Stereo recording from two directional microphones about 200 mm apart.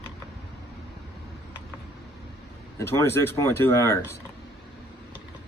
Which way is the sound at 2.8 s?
15° left (ahead or behind).